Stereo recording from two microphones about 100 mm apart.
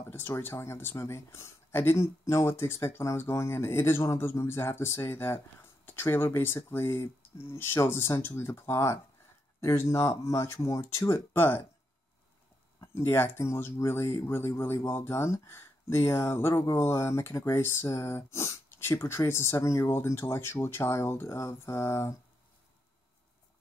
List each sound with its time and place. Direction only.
0.1 s speech: 25° left (ahead or behind)
12.8 s speech: 25° left (ahead or behind)